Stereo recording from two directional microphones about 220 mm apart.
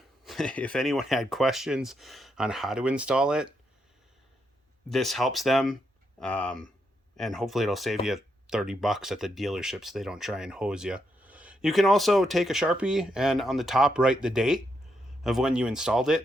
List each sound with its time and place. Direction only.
0.3 s speech: centre (ahead or behind)
4.9 s speech: centre (ahead or behind)